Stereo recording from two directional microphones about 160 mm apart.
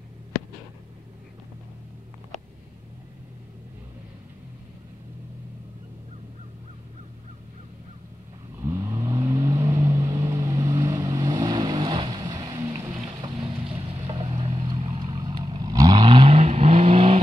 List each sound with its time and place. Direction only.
8.5 s vehicle: 20° right (ahead or behind)
12.9 s boat: 35° right (ahead or behind)
14.6 s vehicle: 30° right (ahead or behind)